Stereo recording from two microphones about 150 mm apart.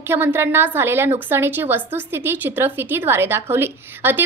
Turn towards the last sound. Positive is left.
turn(degrees=-15)  # may be behind; listen again after turning